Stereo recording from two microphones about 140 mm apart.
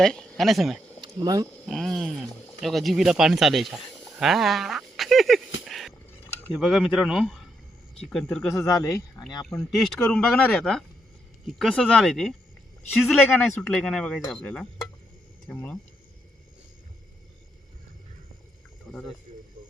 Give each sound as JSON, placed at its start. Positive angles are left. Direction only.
{"t": 0.0, "sound": "speech", "side_deg": 5}
{"t": 1.0, "sound": "speech", "side_deg": -30}
{"t": 1.6, "sound": "speech", "side_deg": 0}
{"t": 8.5, "sound": "speech", "side_deg": 20}
{"t": 9.7, "sound": "speech", "side_deg": 5}
{"t": 13.4, "sound": "speech", "side_deg": 10}
{"t": 18.9, "sound": "speech", "side_deg": 5}